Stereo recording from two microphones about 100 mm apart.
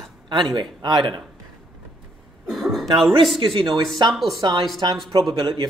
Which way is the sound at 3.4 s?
60° right (ahead or behind).